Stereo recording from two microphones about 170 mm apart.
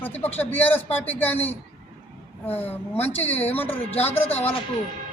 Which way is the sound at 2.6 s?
10° left (ahead or behind).